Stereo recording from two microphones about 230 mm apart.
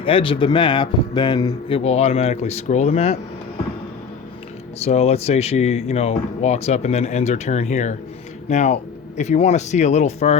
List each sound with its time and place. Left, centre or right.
0.0 s speech: left
4.8 s speech: left